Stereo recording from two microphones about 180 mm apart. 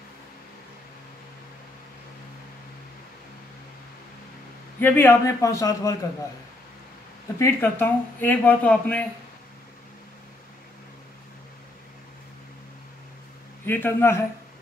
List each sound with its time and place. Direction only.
4.7 s speech: 10° left (ahead or behind)
7.3 s speech: 15° left (ahead or behind)
13.7 s speech: 10° left (ahead or behind)